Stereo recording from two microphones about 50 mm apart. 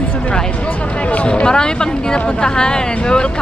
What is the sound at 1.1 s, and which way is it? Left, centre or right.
Speech, left.